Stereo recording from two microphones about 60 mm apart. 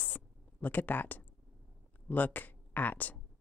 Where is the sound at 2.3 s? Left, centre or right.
Left.